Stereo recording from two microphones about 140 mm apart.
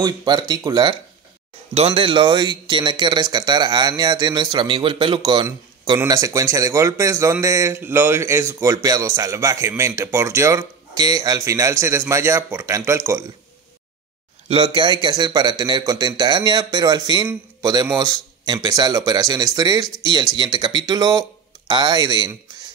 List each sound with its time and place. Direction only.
0.0 s speech: 30° right (ahead or behind)
1.7 s speech: 45° right (ahead or behind); by 13.2 s 20° right (ahead or behind)
14.5 s speech: 35° right (ahead or behind)